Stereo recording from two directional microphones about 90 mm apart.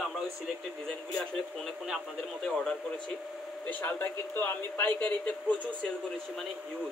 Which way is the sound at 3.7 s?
20° left (ahead or behind).